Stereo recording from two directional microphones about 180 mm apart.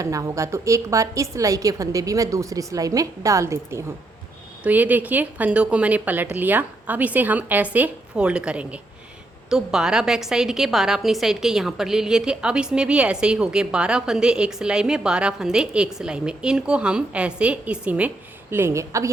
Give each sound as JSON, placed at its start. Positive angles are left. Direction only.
{"t": 0.0, "sound": "a woman's voice", "side_deg": -20}